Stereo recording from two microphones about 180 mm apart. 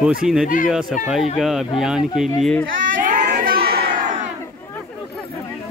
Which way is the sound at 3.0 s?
45° right (ahead or behind).